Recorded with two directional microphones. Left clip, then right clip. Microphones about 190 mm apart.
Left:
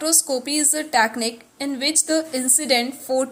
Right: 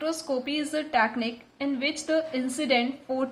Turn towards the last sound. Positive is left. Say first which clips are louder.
# left 6 dB
turn(degrees=30)  # may be behind; listen again after turning